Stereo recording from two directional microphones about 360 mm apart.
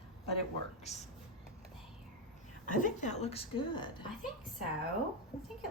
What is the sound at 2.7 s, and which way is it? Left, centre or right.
Speech, left.